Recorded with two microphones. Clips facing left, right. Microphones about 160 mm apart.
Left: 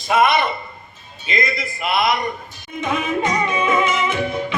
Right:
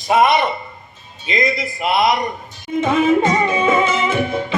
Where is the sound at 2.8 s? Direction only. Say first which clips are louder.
Right 6 dB; 30° right (ahead or behind).